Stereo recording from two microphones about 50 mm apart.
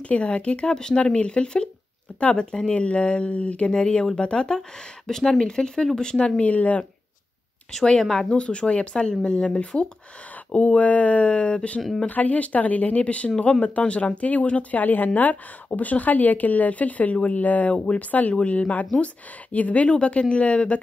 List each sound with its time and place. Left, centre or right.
0.1 s speech: left
7.7 s speech: centre
8.3 s speech: left